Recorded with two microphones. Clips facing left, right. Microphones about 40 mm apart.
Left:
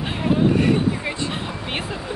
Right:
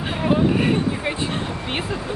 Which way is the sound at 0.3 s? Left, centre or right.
Right.